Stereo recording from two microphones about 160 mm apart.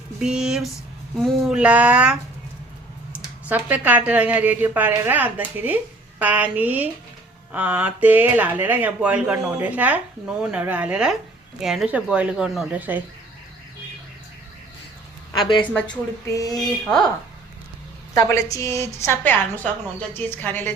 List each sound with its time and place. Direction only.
0.2 s speech: 5° right (ahead or behind)
3.5 s speech: 10° right (ahead or behind)
15.7 s speech: 5° left (ahead or behind)
16.3 s a woman's voice: 20° left (ahead or behind)
16.8 s speech: 5° left (ahead or behind)
18.1 s a woman's voice: 20° left (ahead or behind)